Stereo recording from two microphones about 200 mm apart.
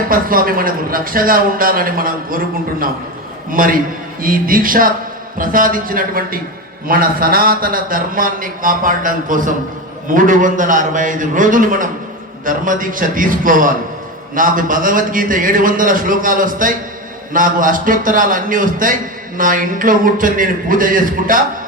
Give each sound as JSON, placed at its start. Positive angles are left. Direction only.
{"t": 0.1, "sound": "a man's voice", "side_deg": -45}
{"t": 3.5, "sound": "a man's voice", "side_deg": -45}